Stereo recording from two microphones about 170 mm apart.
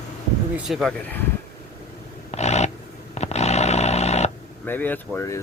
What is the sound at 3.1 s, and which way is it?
Snoring, 40° left (ahead or behind).